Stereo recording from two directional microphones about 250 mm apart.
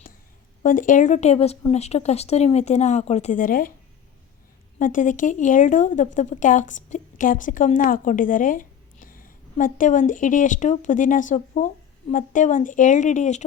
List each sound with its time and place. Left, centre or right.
0.6 s speech: left
4.8 s a woman's voice: left